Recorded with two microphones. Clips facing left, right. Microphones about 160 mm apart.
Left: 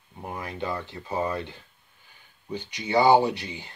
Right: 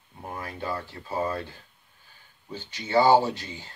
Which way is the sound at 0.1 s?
15° left (ahead or behind).